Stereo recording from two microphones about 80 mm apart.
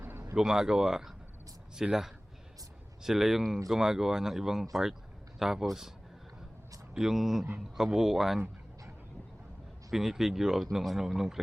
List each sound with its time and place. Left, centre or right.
0.0 s a sound: right
0.3 s speech: centre
6.9 s speech: centre
9.9 s speech: centre